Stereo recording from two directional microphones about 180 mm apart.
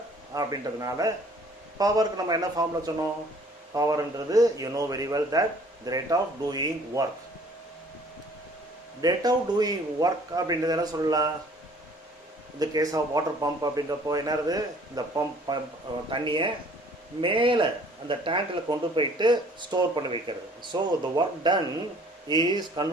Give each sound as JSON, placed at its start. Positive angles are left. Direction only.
{"t": 0.3, "sound": "a man's voice", "side_deg": -20}
{"t": 9.0, "sound": "a man's voice", "side_deg": -20}
{"t": 12.5, "sound": "a man's voice", "side_deg": -20}